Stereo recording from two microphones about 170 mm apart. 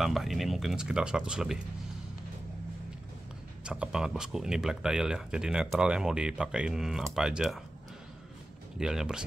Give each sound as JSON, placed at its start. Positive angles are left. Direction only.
{"t": 0.0, "sound": "speech", "side_deg": 0}
{"t": 3.6, "sound": "speech", "side_deg": -5}
{"t": 8.7, "sound": "speech", "side_deg": -5}